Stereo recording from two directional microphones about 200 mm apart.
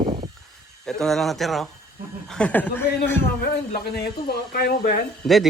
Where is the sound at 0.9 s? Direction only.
Centre (ahead or behind).